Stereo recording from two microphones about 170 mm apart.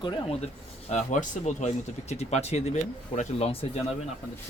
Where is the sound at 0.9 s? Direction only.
45° left (ahead or behind).